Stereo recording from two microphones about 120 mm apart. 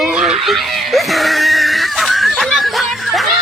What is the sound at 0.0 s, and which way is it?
Screaming, 5° right (ahead or behind).